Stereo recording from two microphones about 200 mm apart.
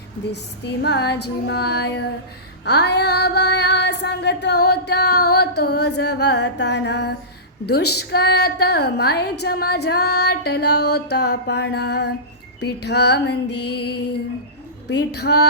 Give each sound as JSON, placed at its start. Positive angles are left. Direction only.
{"t": 0.3, "sound": "female singing", "side_deg": 55}